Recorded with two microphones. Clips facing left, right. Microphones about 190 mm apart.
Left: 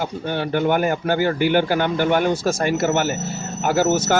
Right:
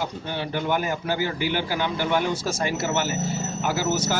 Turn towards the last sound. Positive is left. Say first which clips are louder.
# left 7 dB
turn(degrees=55)  # may be behind; listen again after turning